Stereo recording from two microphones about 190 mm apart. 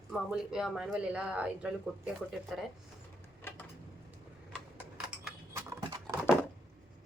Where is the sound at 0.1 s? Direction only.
5° right (ahead or behind).